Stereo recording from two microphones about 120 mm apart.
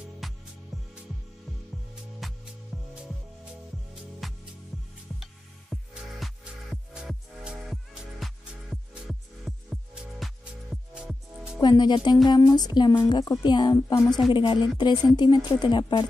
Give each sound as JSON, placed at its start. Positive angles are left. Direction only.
{"t": 0.2, "sound": "music", "side_deg": 0}
{"t": 2.1, "sound": "music", "side_deg": 0}
{"t": 4.2, "sound": "music", "side_deg": 0}
{"t": 11.6, "sound": "speech", "side_deg": 35}